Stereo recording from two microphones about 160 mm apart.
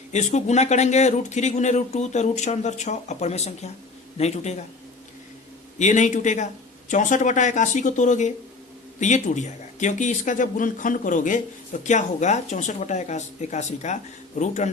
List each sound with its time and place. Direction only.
0.1 s speech: 45° left (ahead or behind)
5.8 s speech: 50° left (ahead or behind)